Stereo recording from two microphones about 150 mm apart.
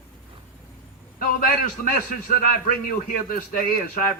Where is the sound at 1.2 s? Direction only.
70° left (ahead or behind).